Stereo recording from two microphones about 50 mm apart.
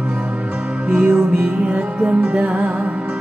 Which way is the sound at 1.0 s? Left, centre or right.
Right.